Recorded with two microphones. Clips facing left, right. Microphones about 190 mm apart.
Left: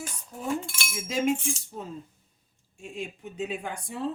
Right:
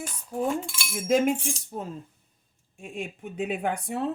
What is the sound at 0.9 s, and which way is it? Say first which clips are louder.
Speech: right 9 dB; 55° right (ahead or behind).